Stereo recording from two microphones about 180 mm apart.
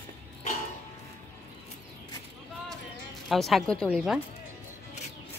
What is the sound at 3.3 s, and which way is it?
Speech, centre (ahead or behind).